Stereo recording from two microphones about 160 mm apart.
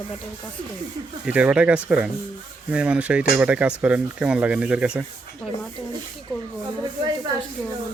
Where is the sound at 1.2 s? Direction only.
5° right (ahead or behind).